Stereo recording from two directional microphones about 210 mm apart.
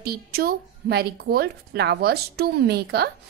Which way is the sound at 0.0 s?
45° right (ahead or behind).